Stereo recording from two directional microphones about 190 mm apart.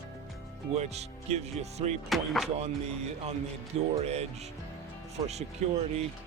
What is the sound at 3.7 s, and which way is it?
Speech, 35° right (ahead or behind).